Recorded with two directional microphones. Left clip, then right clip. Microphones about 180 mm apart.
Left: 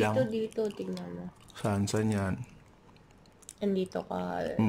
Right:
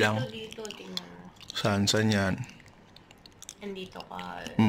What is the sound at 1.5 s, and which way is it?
Speech, 5° left (ahead or behind).